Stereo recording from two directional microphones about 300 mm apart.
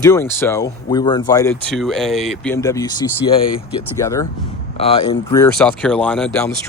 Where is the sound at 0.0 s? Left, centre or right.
Centre.